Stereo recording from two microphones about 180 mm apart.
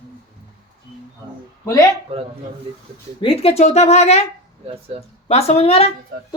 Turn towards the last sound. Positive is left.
turn(degrees=35)  # may be behind; listen again after turning